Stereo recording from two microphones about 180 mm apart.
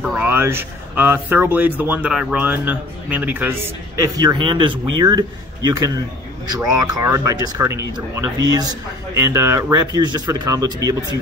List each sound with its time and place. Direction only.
0.0 s speech: 10° right (ahead or behind)